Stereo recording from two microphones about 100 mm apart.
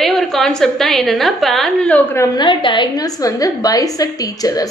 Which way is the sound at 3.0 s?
40° left (ahead or behind).